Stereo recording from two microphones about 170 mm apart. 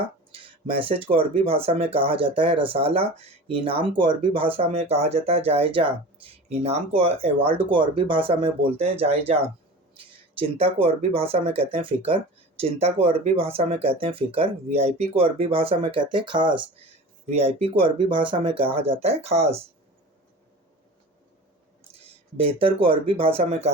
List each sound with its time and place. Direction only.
0.3 s speech: 30° right (ahead or behind)
22.4 s speech: 35° right (ahead or behind)